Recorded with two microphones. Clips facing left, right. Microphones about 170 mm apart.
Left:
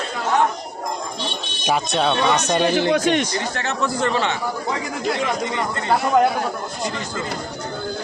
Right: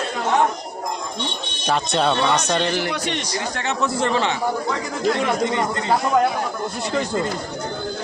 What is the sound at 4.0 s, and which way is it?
Speech, 25° right (ahead or behind).